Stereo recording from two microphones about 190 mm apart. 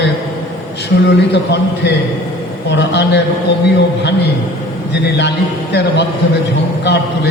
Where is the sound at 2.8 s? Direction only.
65° left (ahead or behind).